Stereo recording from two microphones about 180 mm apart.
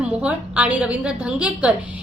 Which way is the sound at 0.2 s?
5° right (ahead or behind).